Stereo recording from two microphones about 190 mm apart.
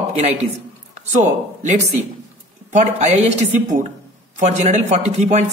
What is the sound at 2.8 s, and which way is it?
A man's voice, 35° right (ahead or behind).